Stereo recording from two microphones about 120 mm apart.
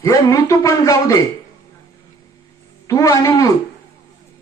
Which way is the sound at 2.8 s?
25° left (ahead or behind).